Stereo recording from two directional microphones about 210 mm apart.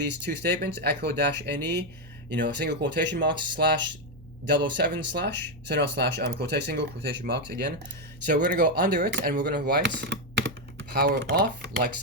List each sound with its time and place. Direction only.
0.3 s speech: 55° right (ahead or behind)
3.3 s speech: 20° right (ahead or behind)
4.6 s speech: 55° right (ahead or behind); by 9.0 s 40° right (ahead or behind)
9.0 s speech: 55° right (ahead or behind)